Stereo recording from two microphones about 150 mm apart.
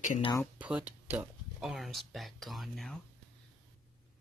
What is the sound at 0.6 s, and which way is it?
Speech, 10° right (ahead or behind).